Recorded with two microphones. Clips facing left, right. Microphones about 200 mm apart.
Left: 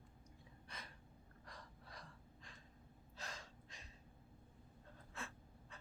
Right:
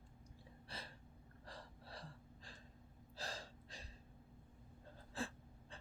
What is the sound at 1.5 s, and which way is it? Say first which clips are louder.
Gasp: right 4 dB; 30° right (ahead or behind).